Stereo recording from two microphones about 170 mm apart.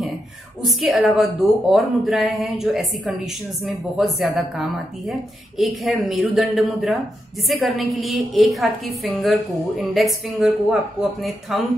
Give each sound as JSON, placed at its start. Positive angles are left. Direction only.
{"t": 0.7, "sound": "a woman's voice", "side_deg": 0}